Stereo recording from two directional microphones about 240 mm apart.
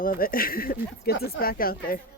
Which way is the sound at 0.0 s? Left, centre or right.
Left.